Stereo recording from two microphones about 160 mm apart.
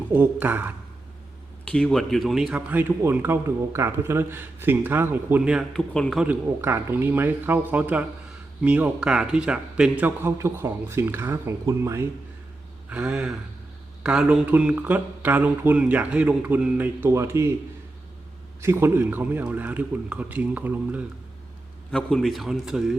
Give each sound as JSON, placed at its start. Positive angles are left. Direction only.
{"t": 0.1, "sound": "speech", "side_deg": -10}
{"t": 1.6, "sound": "speech", "side_deg": 5}
{"t": 6.2, "sound": "speech", "side_deg": -15}
{"t": 12.9, "sound": "a man's voice", "side_deg": -5}
{"t": 18.6, "sound": "speech", "side_deg": -15}
{"t": 21.9, "sound": "a man's voice", "side_deg": 5}